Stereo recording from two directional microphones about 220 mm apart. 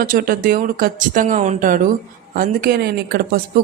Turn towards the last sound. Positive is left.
turn(degrees=-45)  # may be behind; listen again after turning